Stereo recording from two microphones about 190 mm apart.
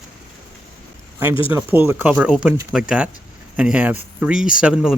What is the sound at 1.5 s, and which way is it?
Speech, 10° right (ahead or behind).